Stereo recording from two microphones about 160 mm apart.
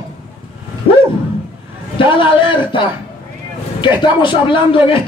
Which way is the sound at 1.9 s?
30° left (ahead or behind).